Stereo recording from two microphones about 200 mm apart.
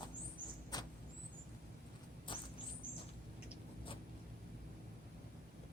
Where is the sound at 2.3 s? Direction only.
25° left (ahead or behind).